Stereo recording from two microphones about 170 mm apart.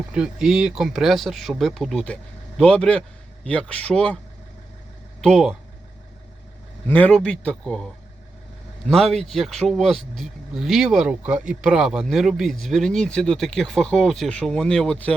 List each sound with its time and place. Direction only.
0.1 s speech: 5° right (ahead or behind)
5.2 s speech: centre (ahead or behind)
6.8 s speech: 10° left (ahead or behind)
8.9 s speech: centre (ahead or behind)